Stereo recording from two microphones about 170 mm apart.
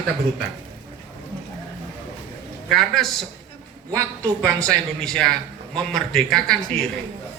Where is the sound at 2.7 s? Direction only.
Centre (ahead or behind).